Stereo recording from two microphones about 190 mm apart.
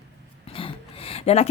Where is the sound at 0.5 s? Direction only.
30° left (ahead or behind).